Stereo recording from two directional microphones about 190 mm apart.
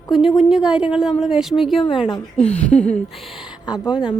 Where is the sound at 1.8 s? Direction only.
25° left (ahead or behind).